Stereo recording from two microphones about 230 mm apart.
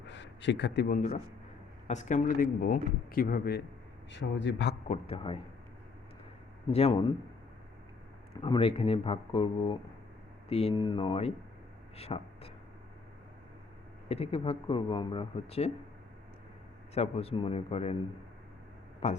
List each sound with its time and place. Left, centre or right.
0.1 s a man's voice: left
4.1 s a man's voice: left
4.9 s speech: left
6.7 s speech: left
8.4 s speech: left
14.1 s speech: left
16.9 s speech: left